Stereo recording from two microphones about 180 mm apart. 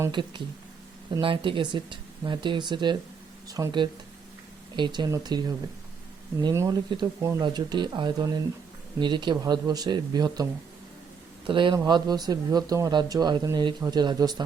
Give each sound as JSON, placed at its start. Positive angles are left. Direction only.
{"t": 0.0, "sound": "speech", "side_deg": -25}
{"t": 11.4, "sound": "speech", "side_deg": -25}